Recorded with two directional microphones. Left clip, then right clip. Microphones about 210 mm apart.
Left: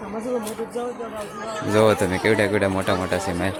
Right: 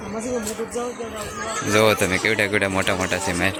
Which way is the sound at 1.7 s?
10° left (ahead or behind).